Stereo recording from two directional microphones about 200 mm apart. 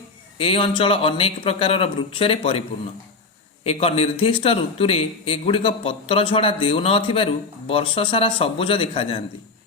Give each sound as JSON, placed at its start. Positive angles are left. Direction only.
{"t": 0.3, "sound": "a man's voice", "side_deg": 25}